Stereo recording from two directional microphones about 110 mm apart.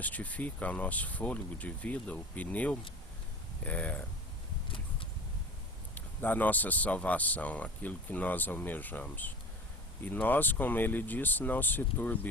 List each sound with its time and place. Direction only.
0.0 s speech: 15° left (ahead or behind)
5.9 s speech: 15° left (ahead or behind)